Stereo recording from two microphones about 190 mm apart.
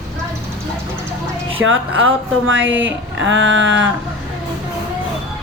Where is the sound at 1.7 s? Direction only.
90° right.